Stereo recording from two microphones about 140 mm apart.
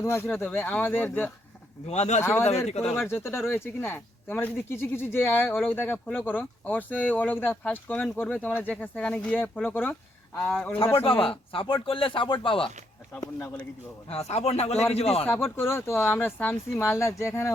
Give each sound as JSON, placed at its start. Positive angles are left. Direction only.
{"t": 0.0, "sound": "speech", "side_deg": 15}
{"t": 1.9, "sound": "a man's voice", "side_deg": 55}
{"t": 2.2, "sound": "speech", "side_deg": 15}
{"t": 11.0, "sound": "speech", "side_deg": 40}
{"t": 13.1, "sound": "speech", "side_deg": 20}
{"t": 14.1, "sound": "a man's voice", "side_deg": 50}
{"t": 15.3, "sound": "speech", "side_deg": 15}